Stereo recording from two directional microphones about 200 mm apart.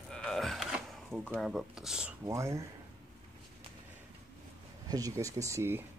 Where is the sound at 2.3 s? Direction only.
15° right (ahead or behind).